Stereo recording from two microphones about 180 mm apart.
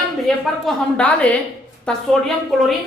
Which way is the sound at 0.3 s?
Centre (ahead or behind).